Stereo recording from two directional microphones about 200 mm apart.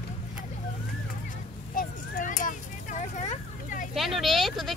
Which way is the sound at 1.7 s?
40° left (ahead or behind).